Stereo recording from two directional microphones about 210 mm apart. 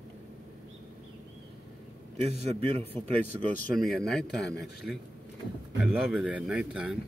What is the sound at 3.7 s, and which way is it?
A man's voice, centre (ahead or behind).